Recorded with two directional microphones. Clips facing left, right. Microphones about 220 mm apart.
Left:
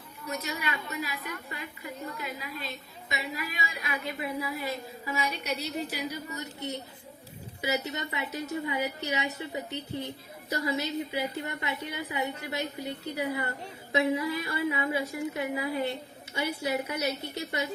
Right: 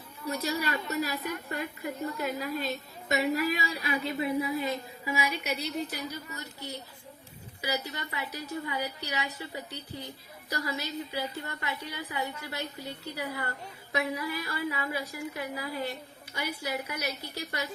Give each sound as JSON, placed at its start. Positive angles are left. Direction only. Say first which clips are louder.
{"t": 0.3, "sound": "a woman's voice", "louder": "right 3 dB", "side_deg": -35}
{"t": 4.2, "sound": "a woman's voice", "louder": "right 5 dB", "side_deg": -25}
{"t": 5.1, "sound": "a woman's voice", "louder": "right 1 dB", "side_deg": -5}
{"t": 5.9, "sound": "a woman's voice", "louder": "left 3 dB", "side_deg": 15}